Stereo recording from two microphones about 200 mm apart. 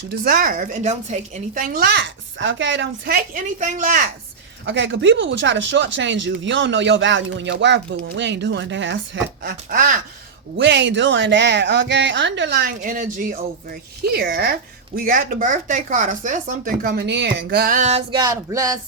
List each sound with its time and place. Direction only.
0.1 s a woman's voice: 45° right (ahead or behind); by 3.2 s 65° right (ahead or behind)
3.3 s a woman's voice: 40° right (ahead or behind)
4.6 s speech: 65° right (ahead or behind)
9.4 s a woman's voice: 50° right (ahead or behind)
10.6 s a woman's voice: 60° right (ahead or behind); by 18.0 s 35° right (ahead or behind)
18.1 s a sound: 20° right (ahead or behind)